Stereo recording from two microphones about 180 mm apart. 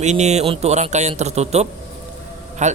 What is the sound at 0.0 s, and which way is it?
Speech, 40° right (ahead or behind).